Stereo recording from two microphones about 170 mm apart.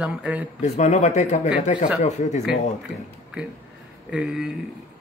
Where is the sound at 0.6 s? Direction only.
45° left (ahead or behind).